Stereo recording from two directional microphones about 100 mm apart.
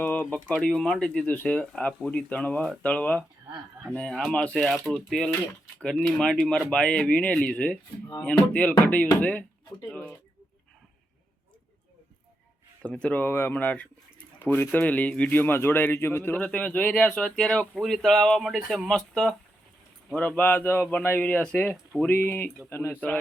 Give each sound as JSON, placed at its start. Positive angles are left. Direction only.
{"t": 0.0, "sound": "speech", "side_deg": 15}
{"t": 12.8, "sound": "speech", "side_deg": 10}
{"t": 20.1, "sound": "speech", "side_deg": 15}